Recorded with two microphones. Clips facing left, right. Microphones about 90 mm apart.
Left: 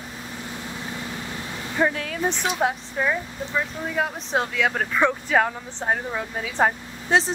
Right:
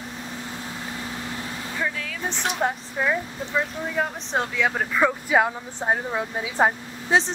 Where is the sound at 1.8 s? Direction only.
45° left (ahead or behind).